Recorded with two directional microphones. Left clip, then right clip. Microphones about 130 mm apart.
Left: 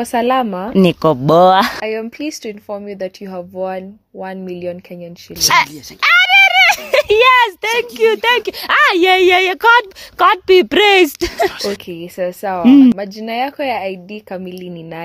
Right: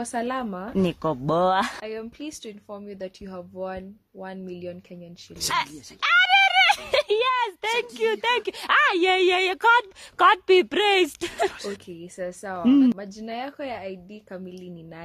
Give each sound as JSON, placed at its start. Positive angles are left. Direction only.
{"t": 0.0, "sound": "a woman's voice", "side_deg": 35}
{"t": 0.7, "sound": "speech", "side_deg": 55}
{"t": 5.4, "sound": "speech", "side_deg": 55}
{"t": 5.9, "sound": "a sound", "side_deg": 30}
{"t": 7.1, "sound": "a sound", "side_deg": 50}
{"t": 7.6, "sound": "speech", "side_deg": 20}
{"t": 10.1, "sound": "speech", "side_deg": 15}
{"t": 10.7, "sound": "a woman's voice", "side_deg": 40}
{"t": 11.5, "sound": "speech", "side_deg": 80}
{"t": 11.9, "sound": "a woman's voice", "side_deg": 40}